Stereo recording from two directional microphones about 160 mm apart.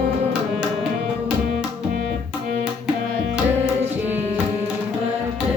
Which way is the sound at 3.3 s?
5° right (ahead or behind).